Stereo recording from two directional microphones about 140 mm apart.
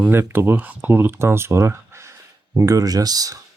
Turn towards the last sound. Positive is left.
turn(degrees=-25)  # may be behind; listen again after turning